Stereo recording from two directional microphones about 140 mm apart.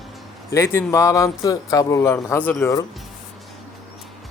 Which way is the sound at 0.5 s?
15° left (ahead or behind).